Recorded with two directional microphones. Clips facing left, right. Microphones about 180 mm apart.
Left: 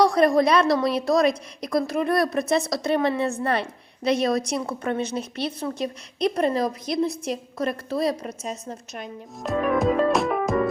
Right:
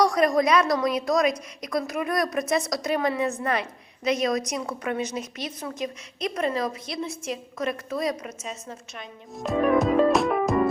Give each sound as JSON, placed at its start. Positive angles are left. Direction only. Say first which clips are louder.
{"t": 0.0, "sound": "a woman's voice", "louder": "left 3 dB", "side_deg": 30}
{"t": 9.4, "sound": "music", "louder": "right 1 dB", "side_deg": 0}